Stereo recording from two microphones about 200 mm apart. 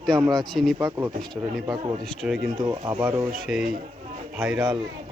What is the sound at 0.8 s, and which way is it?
Speech, 15° right (ahead or behind).